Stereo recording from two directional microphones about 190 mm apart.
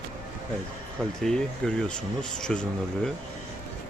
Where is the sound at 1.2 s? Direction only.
5° left (ahead or behind).